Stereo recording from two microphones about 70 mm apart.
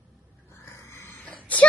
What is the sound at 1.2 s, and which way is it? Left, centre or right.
Whimper, left.